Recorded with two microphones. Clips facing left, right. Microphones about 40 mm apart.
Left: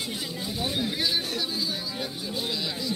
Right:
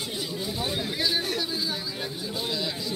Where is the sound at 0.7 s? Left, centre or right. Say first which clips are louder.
Left 1 dB; centre.